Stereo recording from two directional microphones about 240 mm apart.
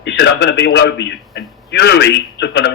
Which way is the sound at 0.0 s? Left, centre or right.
Left.